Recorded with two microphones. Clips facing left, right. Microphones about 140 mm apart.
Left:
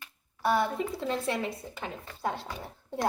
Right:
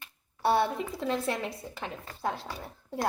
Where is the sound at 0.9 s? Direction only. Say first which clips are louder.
Even; centre (ahead or behind).